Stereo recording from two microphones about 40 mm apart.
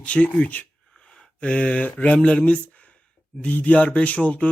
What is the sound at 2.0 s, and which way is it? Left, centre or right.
Speech, left.